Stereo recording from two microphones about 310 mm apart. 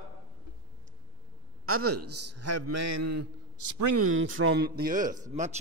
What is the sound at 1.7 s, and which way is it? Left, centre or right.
A man's voice, right.